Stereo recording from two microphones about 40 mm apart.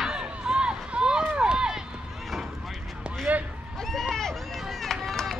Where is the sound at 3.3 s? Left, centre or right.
Right.